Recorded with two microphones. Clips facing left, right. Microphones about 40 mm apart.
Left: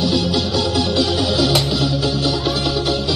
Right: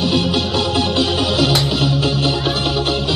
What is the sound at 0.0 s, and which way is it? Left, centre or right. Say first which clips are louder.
Music: right 1 dB; right.